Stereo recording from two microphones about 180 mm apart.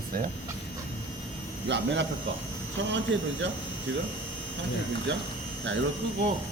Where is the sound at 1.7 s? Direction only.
80° right.